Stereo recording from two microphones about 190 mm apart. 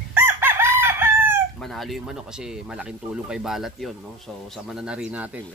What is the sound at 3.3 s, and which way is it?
Speech, 5° right (ahead or behind).